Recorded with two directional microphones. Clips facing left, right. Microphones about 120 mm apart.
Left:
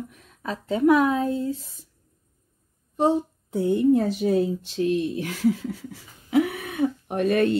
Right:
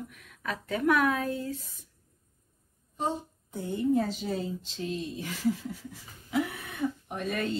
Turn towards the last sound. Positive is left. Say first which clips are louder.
# left 11 dB
turn(degrees=75)  # may be behind; listen again after turning